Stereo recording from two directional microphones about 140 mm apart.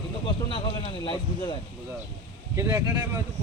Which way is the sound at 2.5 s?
25° right (ahead or behind).